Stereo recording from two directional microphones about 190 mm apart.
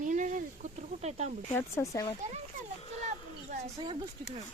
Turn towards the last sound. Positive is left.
turn(degrees=-40)  # may be behind; listen again after turning